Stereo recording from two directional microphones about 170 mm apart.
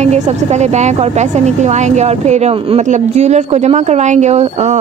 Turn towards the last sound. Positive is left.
turn(degrees=-40)  # may be behind; listen again after turning